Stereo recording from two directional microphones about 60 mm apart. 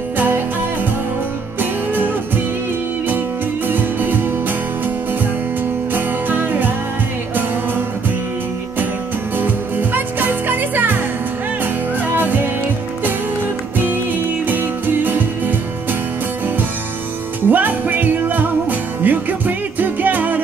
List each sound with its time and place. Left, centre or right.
1.6 s music: right
3.6 s music: right
5.9 s music: right
9.4 s music: right
14.5 s music: right
17.5 s music: right